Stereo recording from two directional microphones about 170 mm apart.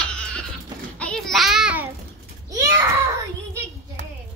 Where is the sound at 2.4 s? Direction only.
20° right (ahead or behind).